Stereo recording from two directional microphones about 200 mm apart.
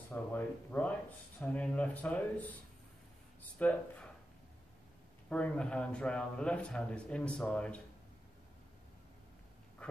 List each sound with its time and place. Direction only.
0.1 s speech: 10° left (ahead or behind)
3.5 s speech: 5° left (ahead or behind)
5.3 s a man's voice: 5° left (ahead or behind)
9.8 s dog: 5° left (ahead or behind)